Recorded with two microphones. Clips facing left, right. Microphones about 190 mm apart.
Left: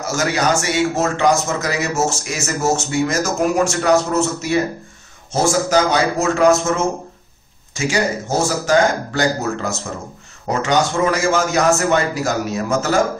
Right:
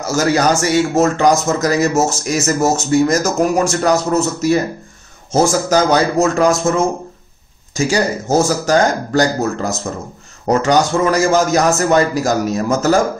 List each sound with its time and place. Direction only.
0.0 s speech: 40° right (ahead or behind)
7.7 s speech: 40° right (ahead or behind)